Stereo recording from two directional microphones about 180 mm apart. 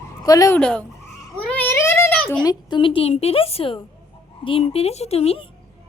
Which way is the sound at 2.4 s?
25° left (ahead or behind).